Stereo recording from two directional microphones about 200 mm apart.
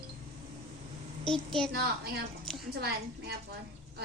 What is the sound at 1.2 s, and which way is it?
Speech, centre (ahead or behind).